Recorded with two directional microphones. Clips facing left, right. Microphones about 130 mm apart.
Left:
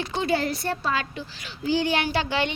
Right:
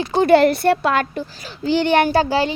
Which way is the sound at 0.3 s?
65° right (ahead or behind).